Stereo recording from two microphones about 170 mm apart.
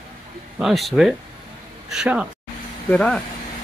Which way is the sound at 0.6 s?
Centre (ahead or behind).